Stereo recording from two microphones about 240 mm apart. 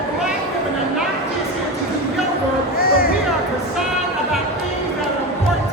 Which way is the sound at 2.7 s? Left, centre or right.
Left.